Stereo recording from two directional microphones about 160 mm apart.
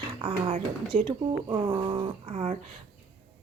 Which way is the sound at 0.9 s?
55° right (ahead or behind).